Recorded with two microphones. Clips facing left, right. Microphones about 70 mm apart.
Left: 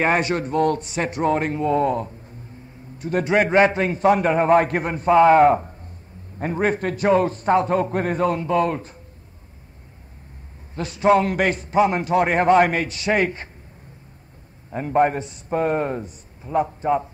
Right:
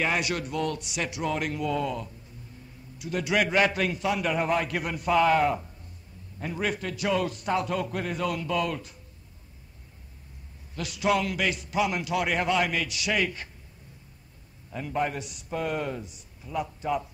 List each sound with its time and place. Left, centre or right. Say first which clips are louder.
0.0 s a man's voice: left 7 dB; left
10.7 s a man's voice: left 9 dB; left
14.7 s a man's voice: left 10 dB; left